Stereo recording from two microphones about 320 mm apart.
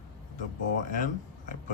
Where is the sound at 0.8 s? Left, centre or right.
Left.